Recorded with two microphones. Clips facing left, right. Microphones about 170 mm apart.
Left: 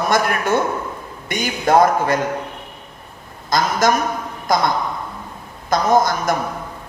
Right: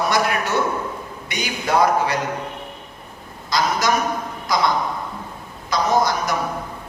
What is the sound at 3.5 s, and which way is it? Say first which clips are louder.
A man's voice: left 3 dB; 50° left (ahead or behind).